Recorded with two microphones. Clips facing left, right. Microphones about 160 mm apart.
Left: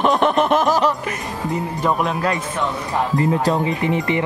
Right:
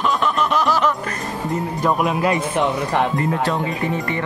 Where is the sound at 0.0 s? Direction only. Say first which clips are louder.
Left 4 dB; 55° left (ahead or behind).